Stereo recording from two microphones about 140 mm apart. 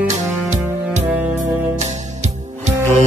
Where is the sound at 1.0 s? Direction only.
10° right (ahead or behind).